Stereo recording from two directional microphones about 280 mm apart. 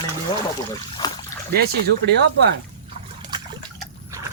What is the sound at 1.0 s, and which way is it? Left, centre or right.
Splash, centre.